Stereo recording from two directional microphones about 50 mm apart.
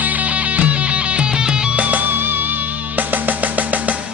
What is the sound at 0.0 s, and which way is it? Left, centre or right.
Music, right.